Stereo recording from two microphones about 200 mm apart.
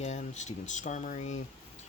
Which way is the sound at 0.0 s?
35° left (ahead or behind).